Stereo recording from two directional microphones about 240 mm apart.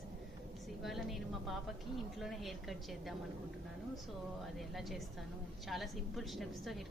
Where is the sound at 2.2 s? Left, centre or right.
Centre.